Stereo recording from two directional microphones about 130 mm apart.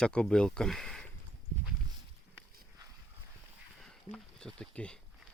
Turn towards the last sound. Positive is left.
turn(degrees=5)  # may be behind; listen again after turning